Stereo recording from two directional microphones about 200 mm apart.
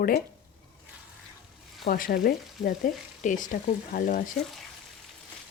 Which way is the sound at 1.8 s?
45° left (ahead or behind).